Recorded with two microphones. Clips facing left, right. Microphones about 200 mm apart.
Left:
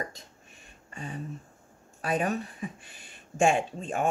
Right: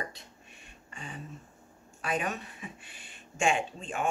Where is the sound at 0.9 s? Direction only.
40° left (ahead or behind).